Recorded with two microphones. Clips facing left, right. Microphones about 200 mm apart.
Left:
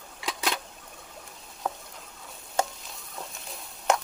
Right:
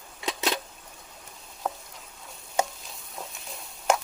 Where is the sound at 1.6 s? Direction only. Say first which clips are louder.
Right 1 dB; centre (ahead or behind).